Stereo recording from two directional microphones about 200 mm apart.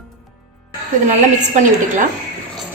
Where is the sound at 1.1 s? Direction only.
35° right (ahead or behind).